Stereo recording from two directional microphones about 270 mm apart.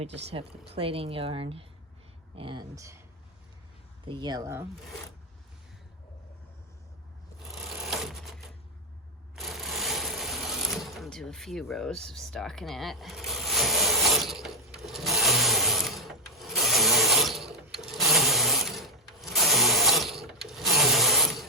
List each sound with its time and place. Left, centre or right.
0.8 s a woman's voice: right
4.1 s speech: centre
7.9 s sewing machine: centre
14.8 s rub: centre